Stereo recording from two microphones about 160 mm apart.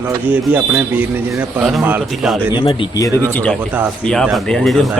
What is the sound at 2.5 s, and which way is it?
Speech, 30° left (ahead or behind).